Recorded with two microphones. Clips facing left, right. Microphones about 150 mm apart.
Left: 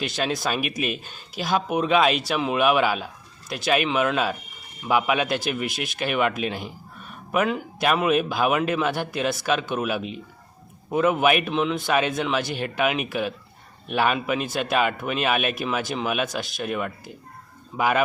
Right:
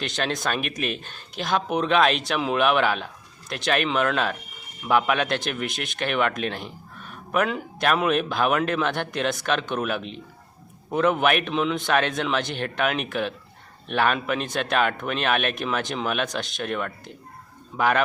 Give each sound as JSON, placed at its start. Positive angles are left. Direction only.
{"t": 0.0, "sound": "speech", "side_deg": 5}